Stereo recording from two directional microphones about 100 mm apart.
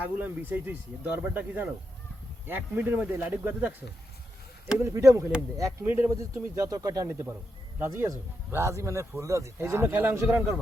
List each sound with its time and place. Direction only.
0.2 s speech: 20° right (ahead or behind)
4.8 s speech: 30° right (ahead or behind)